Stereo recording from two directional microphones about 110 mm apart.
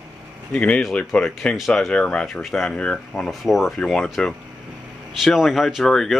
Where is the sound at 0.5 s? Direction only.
10° left (ahead or behind).